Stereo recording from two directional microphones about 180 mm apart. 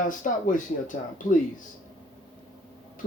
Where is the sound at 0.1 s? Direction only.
45° left (ahead or behind).